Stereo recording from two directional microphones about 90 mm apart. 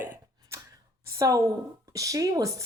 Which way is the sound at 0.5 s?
30° right (ahead or behind).